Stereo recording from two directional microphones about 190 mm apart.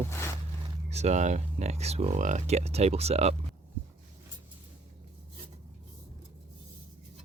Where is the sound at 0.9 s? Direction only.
35° right (ahead or behind).